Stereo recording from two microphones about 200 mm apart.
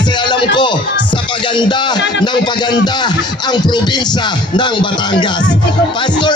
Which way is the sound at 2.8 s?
20° left (ahead or behind).